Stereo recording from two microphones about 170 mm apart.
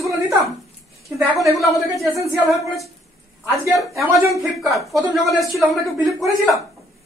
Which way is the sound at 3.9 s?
20° right (ahead or behind).